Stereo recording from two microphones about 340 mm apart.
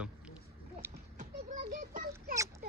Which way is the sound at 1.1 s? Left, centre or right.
Right.